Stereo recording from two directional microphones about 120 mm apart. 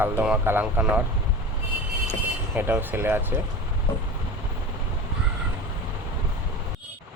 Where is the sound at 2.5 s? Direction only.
15° right (ahead or behind).